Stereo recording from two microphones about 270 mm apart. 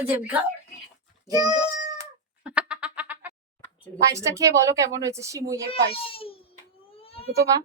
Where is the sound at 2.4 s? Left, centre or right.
Centre.